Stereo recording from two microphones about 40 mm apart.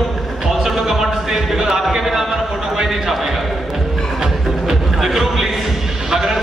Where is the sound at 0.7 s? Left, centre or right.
Centre.